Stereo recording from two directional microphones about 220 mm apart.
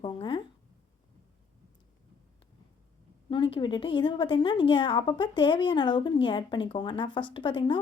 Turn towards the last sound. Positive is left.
turn(degrees=20)  # may be behind; listen again after turning